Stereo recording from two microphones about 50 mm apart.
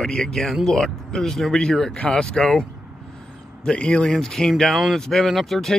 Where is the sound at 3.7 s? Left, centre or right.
Left.